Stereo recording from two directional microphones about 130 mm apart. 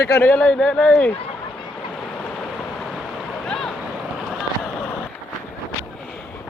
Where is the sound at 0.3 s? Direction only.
10° left (ahead or behind).